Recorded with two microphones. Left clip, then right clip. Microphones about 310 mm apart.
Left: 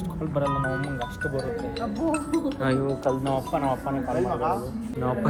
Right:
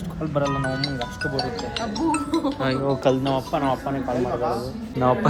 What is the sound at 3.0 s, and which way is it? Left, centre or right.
Speech, right.